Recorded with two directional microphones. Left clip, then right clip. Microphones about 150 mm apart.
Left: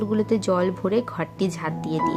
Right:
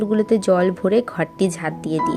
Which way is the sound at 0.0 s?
15° right (ahead or behind).